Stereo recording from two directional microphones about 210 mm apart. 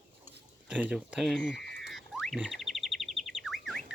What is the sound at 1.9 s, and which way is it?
Bird, centre (ahead or behind).